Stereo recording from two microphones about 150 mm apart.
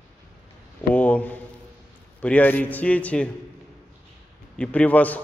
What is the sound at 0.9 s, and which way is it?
A man's voice, 10° left (ahead or behind).